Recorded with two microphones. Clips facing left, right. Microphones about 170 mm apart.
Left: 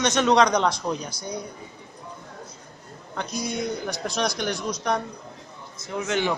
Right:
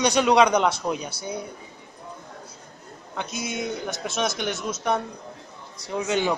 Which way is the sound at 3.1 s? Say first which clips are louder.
Left 1 dB; 5° right (ahead or behind).